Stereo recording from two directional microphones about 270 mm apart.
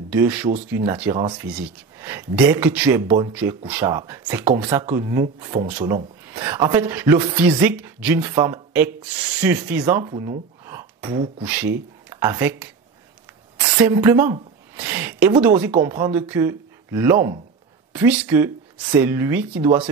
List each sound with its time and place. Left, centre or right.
0.1 s speech: centre
1.1 s speech: centre
13.7 s a woman's voice: centre